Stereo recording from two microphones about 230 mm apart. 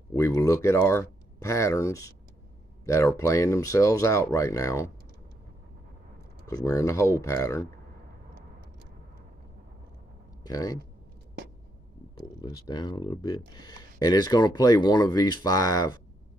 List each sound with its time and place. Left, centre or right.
0.1 s speech: centre
6.4 s speech: centre
10.4 s speech: centre
12.4 s speech: centre